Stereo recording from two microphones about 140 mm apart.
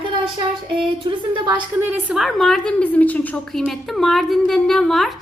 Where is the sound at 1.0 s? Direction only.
35° right (ahead or behind).